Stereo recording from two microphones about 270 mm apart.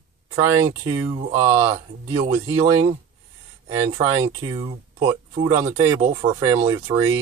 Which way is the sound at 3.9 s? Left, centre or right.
Centre.